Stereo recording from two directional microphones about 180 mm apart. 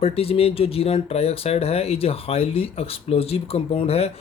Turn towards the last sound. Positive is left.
turn(degrees=35)  # may be behind; listen again after turning